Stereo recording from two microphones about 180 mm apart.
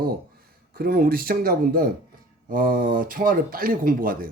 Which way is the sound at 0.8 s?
55° right (ahead or behind).